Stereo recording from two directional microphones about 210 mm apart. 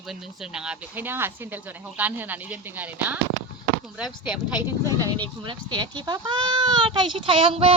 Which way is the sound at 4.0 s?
20° left (ahead or behind).